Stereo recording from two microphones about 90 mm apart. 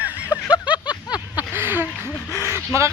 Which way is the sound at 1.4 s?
25° right (ahead or behind).